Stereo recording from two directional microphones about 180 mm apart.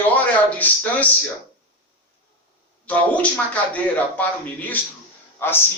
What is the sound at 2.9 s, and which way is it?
Speech, 10° left (ahead or behind).